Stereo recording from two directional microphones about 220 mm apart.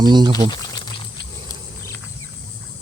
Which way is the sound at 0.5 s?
20° left (ahead or behind).